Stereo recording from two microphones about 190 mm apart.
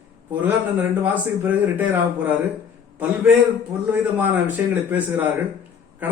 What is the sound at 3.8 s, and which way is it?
Speech, 10° right (ahead or behind).